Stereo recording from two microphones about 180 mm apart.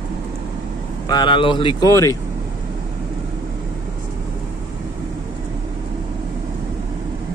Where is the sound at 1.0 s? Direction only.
25° left (ahead or behind).